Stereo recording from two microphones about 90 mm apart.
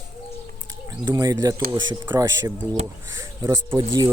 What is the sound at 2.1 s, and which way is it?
Speech, 55° right (ahead or behind).